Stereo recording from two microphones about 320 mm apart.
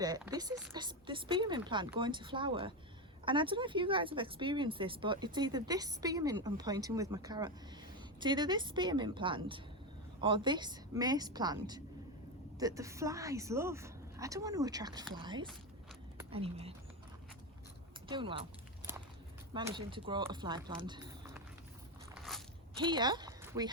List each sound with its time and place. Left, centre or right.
0.3 s speech: centre
18.1 s speech: centre
19.5 s speech: centre
22.2 s biting: centre
22.8 s speech: centre